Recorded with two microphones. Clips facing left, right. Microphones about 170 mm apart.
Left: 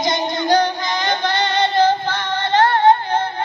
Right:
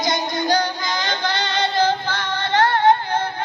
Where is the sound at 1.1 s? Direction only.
55° left (ahead or behind).